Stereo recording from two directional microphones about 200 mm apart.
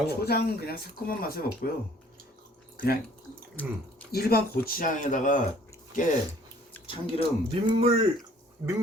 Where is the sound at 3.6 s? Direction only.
5° left (ahead or behind).